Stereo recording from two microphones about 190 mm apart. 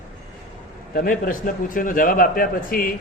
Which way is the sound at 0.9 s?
45° left (ahead or behind).